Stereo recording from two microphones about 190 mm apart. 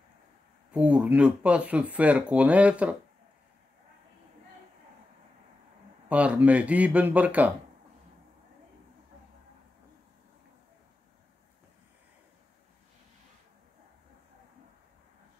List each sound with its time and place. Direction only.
0.7 s speech: 5° right (ahead or behind)
6.0 s speech: 5° right (ahead or behind)